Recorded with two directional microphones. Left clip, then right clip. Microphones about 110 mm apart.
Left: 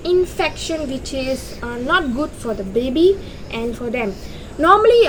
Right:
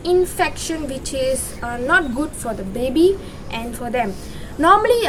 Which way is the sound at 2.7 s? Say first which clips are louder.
Left 1 dB; 40° right (ahead or behind).